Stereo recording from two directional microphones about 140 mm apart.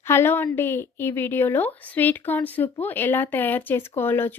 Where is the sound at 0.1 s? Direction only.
15° left (ahead or behind).